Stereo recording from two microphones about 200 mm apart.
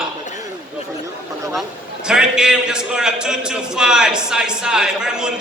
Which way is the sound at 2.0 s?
5° right (ahead or behind).